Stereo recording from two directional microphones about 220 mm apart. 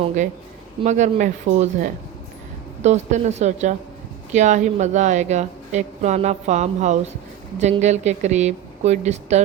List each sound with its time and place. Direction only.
0.8 s a woman's voice: 30° right (ahead or behind)